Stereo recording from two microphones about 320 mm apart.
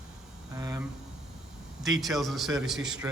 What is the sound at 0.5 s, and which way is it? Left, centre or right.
A man's voice, centre.